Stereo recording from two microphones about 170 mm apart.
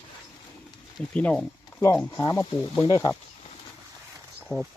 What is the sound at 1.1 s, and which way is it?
Speech, 10° left (ahead or behind).